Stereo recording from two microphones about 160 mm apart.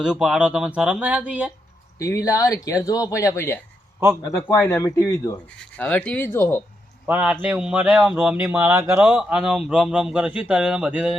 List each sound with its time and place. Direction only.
0.0 s speech: 5° right (ahead or behind)
2.0 s speech: 20° left (ahead or behind)
5.5 s speech: 10° left (ahead or behind)
7.1 s speech: 10° right (ahead or behind)